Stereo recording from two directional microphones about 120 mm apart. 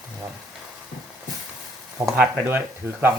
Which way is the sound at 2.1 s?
10° right (ahead or behind).